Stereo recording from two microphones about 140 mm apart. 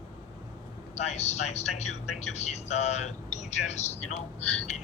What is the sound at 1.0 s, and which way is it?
Speech, 50° left (ahead or behind).